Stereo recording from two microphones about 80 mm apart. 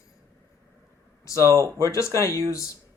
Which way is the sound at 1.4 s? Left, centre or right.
Right.